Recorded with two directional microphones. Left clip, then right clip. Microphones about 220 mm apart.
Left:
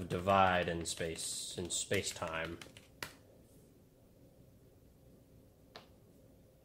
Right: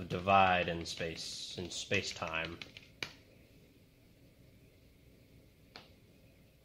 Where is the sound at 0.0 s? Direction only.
30° left (ahead or behind).